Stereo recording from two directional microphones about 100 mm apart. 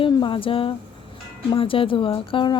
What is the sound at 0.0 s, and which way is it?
Speech, 60° left (ahead or behind).